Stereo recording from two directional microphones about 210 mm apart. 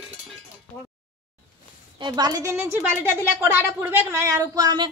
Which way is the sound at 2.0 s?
20° right (ahead or behind).